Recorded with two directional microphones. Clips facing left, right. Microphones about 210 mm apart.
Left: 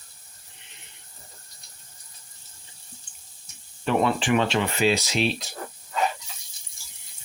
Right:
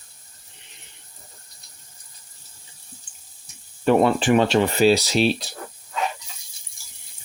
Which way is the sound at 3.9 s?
40° right (ahead or behind).